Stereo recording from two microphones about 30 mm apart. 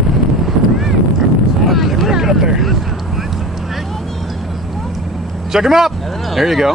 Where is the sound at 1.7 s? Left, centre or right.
Centre.